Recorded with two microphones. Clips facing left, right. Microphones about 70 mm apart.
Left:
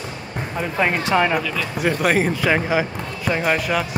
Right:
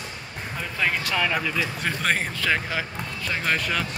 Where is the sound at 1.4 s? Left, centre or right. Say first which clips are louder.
Left 1 dB; centre.